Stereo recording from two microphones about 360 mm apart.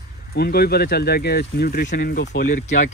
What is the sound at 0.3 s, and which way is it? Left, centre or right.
Speech, left.